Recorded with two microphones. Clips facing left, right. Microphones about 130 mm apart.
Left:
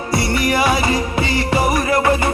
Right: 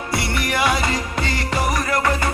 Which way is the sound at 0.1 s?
Centre (ahead or behind).